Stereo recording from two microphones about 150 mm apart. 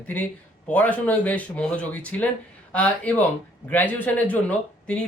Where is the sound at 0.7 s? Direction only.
10° left (ahead or behind).